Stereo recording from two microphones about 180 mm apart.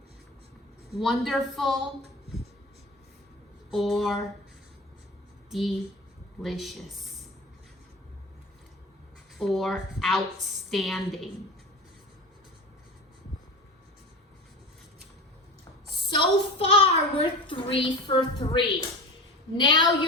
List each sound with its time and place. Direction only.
0.9 s a woman's voice: centre (ahead or behind)
3.7 s a woman's voice: centre (ahead or behind)
5.5 s a woman's voice: centre (ahead or behind)
9.4 s a woman's voice: centre (ahead or behind)
16.0 s a woman's voice: 30° left (ahead or behind)